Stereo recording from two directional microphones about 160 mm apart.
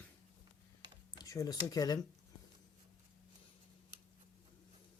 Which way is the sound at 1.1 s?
20° left (ahead or behind).